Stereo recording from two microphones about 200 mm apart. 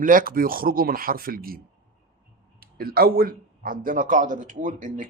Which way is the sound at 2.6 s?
50° right (ahead or behind).